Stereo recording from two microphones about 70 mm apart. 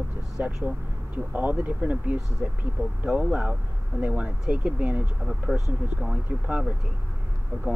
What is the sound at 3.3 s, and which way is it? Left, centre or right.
Speech, centre.